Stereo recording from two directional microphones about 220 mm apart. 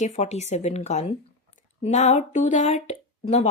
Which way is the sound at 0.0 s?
30° left (ahead or behind).